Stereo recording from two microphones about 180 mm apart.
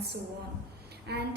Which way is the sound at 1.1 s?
65° right (ahead or behind).